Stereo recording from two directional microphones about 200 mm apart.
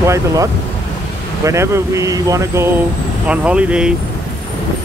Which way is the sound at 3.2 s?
5° right (ahead or behind).